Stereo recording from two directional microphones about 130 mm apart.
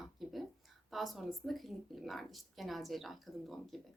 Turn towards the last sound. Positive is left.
turn(degrees=0)  # may be behind; listen again after turning